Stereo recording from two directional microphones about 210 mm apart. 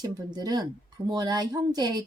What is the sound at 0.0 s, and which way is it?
A woman's voice, 20° right (ahead or behind).